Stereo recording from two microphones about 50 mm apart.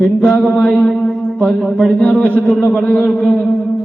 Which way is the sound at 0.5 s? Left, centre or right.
Left.